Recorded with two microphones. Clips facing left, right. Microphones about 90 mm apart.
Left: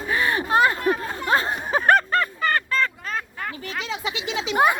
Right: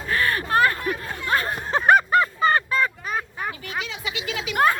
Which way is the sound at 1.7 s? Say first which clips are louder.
Right 2 dB; 5° right (ahead or behind).